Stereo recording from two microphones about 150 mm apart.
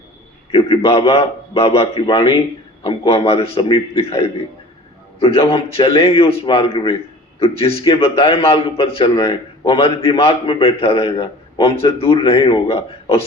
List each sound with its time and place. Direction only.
0.5 s a man's voice: 40° left (ahead or behind)